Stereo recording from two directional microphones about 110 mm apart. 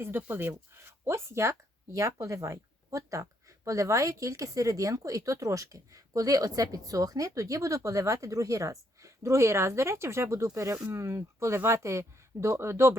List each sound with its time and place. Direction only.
0.0 s speech: 20° right (ahead or behind)